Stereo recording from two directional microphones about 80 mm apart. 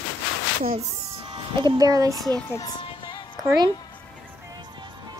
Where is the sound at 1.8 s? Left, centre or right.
Right.